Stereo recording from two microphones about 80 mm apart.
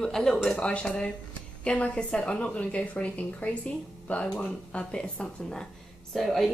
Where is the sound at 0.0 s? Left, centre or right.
Centre.